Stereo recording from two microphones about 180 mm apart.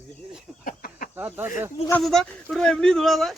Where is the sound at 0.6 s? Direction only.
50° left (ahead or behind).